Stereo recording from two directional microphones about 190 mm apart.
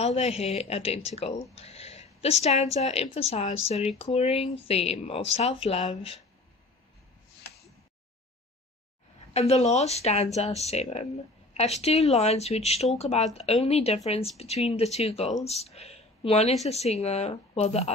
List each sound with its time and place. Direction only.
0.0 s speech: 30° left (ahead or behind)
9.3 s speech: 35° left (ahead or behind)